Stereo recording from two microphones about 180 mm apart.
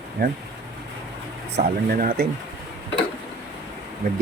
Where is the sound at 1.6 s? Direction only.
50° right (ahead or behind).